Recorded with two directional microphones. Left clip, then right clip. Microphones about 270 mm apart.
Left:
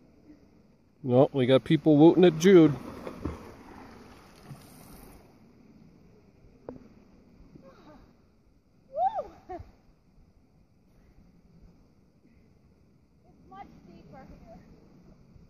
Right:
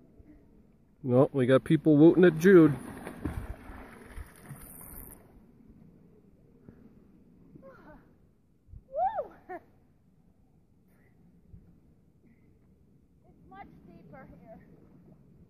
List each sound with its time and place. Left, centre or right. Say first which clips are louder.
1.0 s speech: left 2 dB; centre
3.0 s boat: left 2 dB; right
8.9 s a sound: left 2 dB; centre